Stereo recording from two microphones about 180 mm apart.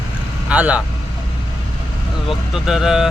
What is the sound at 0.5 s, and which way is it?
Speech, 5° right (ahead or behind).